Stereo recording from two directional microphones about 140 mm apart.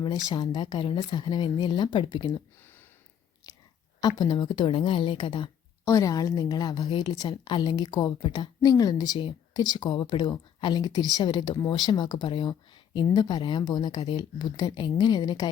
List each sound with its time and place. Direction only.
0.3 s speech: 35° left (ahead or behind)
4.2 s speech: 35° left (ahead or behind)
5.8 s a woman's voice: 25° left (ahead or behind)